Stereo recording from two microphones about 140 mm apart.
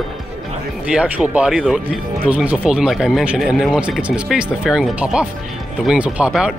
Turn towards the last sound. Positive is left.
turn(degrees=-5)  # may be behind; listen again after turning